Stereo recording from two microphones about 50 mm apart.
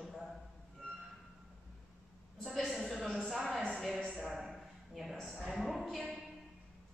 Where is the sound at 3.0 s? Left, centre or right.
Centre.